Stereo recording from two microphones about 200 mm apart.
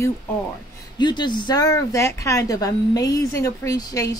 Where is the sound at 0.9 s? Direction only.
20° left (ahead or behind).